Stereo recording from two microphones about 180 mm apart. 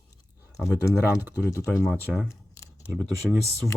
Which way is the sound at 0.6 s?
5° right (ahead or behind).